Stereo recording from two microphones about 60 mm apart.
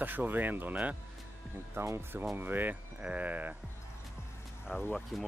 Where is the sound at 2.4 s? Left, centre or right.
Right.